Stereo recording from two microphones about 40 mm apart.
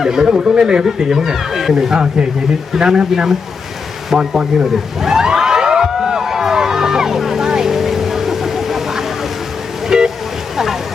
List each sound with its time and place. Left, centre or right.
0.0 s speech: centre
0.9 s speech: centre
4.1 s a sound: centre
7.4 s vehicle: centre